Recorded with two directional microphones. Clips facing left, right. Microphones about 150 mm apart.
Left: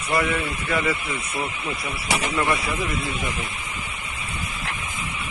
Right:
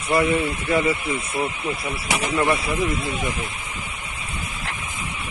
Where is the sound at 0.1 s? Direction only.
25° right (ahead or behind).